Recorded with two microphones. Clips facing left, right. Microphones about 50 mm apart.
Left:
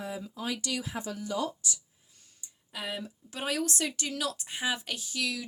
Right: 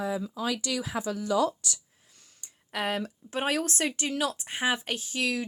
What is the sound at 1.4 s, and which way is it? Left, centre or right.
Speech, right.